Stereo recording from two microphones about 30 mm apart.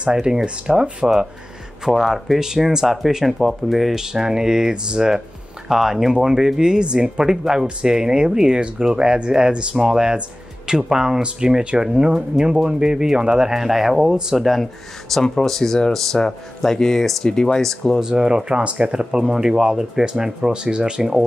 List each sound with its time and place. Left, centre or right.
0.1 s speech: centre
1.9 s speech: centre
2.4 s speech: centre
3.9 s speech: centre
9.8 s speech: right
13.5 s speech: centre
15.1 s speech: centre
17.9 s speech: right
18.6 s speech: right
19.1 s speech: right